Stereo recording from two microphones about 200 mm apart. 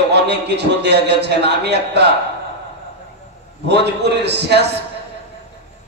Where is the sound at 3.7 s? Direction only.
55° right (ahead or behind).